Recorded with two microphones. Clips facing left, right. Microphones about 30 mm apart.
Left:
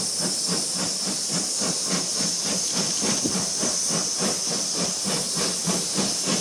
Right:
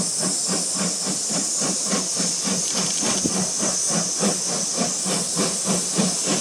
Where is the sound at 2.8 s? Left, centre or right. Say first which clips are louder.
Right 1 dB; centre.